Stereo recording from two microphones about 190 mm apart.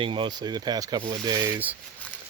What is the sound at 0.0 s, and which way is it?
Speech, 25° right (ahead or behind).